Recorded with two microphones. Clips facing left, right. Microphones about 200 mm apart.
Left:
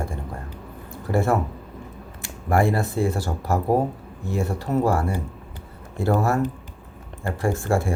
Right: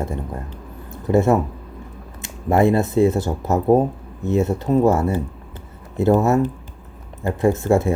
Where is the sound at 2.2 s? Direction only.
20° right (ahead or behind).